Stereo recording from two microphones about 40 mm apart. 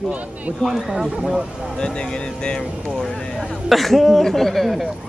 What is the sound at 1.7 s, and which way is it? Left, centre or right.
Speech, centre.